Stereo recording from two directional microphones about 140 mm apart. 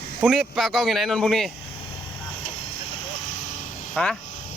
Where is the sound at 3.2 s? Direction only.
60° left (ahead or behind).